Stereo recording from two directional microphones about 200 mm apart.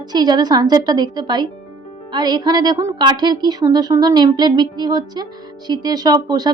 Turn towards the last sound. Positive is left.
turn(degrees=-20)  # may be behind; listen again after turning